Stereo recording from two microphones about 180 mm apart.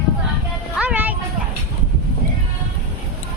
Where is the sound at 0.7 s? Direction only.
10° right (ahead or behind).